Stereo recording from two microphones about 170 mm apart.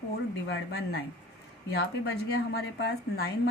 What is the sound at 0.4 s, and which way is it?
A woman's voice, 75° left (ahead or behind).